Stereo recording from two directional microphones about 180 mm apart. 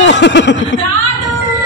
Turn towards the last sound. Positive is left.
turn(degrees=75)  # may be behind; listen again after turning